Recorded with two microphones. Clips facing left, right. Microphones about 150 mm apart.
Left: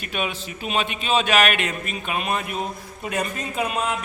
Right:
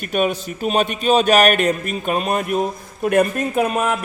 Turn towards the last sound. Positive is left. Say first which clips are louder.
# right 7 dB
turn(degrees=-50)  # may be behind; listen again after turning